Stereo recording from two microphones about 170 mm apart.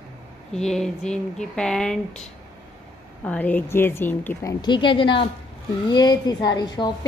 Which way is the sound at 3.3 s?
10° left (ahead or behind).